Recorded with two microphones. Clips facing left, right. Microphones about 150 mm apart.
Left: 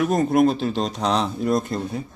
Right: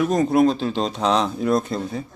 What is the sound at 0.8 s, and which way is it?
Speech, 35° right (ahead or behind).